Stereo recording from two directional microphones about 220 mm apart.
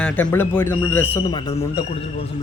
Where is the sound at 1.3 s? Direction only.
20° left (ahead or behind).